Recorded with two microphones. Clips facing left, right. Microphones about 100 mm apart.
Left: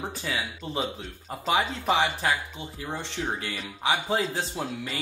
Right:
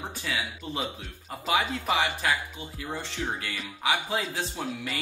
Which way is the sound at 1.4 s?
30° left (ahead or behind).